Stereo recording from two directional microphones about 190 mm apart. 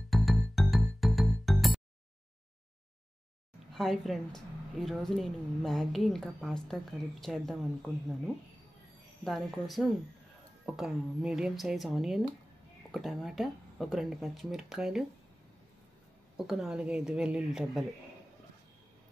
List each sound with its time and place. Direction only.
0.1 s music: centre (ahead or behind)
3.7 s a woman's voice: centre (ahead or behind)
9.2 s a woman's voice: centre (ahead or behind)
16.3 s a woman's voice: centre (ahead or behind)